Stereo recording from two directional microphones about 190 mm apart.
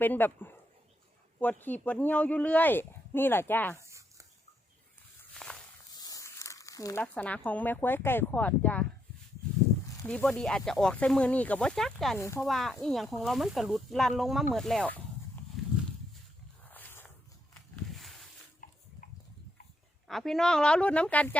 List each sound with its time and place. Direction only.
0.0 s speech: 10° left (ahead or behind)
3.8 s a sound: 15° right (ahead or behind)
5.3 s walk: 5° left (ahead or behind)
5.9 s crumpling: 20° left (ahead or behind)
7.0 s speech: 10° left (ahead or behind)
10.1 s speech: 5° left (ahead or behind)
12.1 s speech: 15° left (ahead or behind)
12.5 s speech: centre (ahead or behind)
15.6 s horse: centre (ahead or behind)
16.7 s a sound: 10° left (ahead or behind)
18.6 s a sound: 45° left (ahead or behind)
20.1 s speech: centre (ahead or behind)